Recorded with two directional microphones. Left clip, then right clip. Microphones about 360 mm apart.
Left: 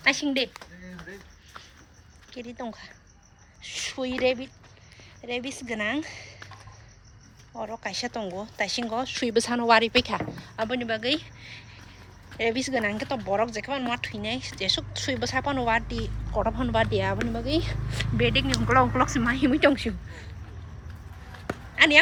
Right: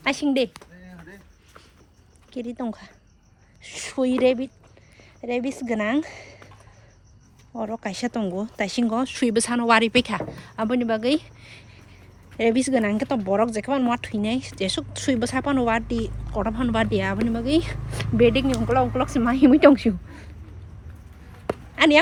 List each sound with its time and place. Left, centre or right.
0.0 s speech: centre
2.3 s speech: centre
3.8 s speech: centre
7.6 s a woman's voice: centre
18.7 s speech: centre
19.2 s speech: centre
21.4 s a sound: centre